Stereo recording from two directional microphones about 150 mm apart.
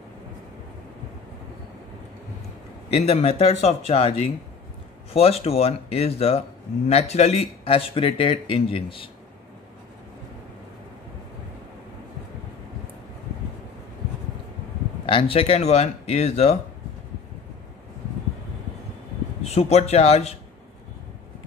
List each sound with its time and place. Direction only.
2.9 s speech: 40° left (ahead or behind)
15.0 s speech: 35° left (ahead or behind)
19.4 s speech: 45° left (ahead or behind)